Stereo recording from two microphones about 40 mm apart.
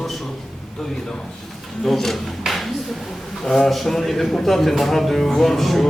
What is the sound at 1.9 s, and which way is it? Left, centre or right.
A man's voice, centre.